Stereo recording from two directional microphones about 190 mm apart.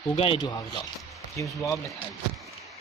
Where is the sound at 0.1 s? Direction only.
30° left (ahead or behind).